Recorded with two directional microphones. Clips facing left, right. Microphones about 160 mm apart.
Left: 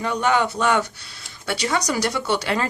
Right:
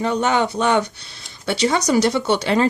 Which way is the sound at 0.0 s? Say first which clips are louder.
Right 2 dB; 25° right (ahead or behind).